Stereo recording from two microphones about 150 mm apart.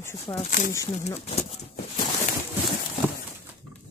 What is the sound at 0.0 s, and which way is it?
Speech, 15° left (ahead or behind).